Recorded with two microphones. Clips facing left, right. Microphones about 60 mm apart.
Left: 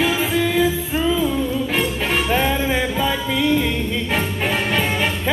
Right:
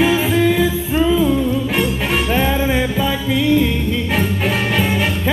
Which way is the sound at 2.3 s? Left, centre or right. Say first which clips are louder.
Right 3 dB; centre.